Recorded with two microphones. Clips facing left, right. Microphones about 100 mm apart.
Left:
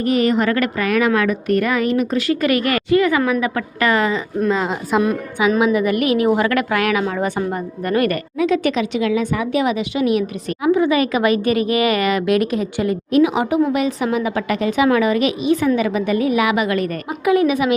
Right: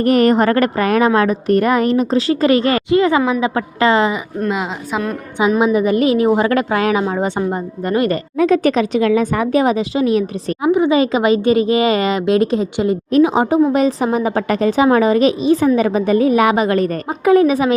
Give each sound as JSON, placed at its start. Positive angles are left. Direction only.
{"t": 0.0, "sound": "speech", "side_deg": -50}
{"t": 4.4, "sound": "a woman's voice", "side_deg": -5}
{"t": 5.5, "sound": "speech", "side_deg": -25}
{"t": 8.4, "sound": "speech", "side_deg": -40}
{"t": 10.7, "sound": "speech", "side_deg": -20}